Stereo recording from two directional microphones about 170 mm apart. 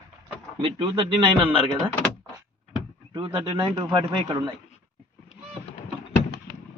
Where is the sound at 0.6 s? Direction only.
35° right (ahead or behind).